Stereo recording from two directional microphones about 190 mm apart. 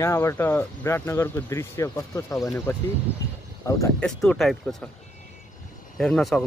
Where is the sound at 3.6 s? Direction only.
15° left (ahead or behind).